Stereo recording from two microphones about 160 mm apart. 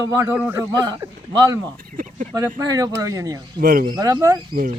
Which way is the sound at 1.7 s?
60° right (ahead or behind).